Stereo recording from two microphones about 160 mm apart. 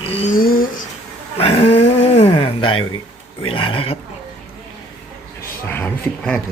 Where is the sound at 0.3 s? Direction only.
65° left (ahead or behind).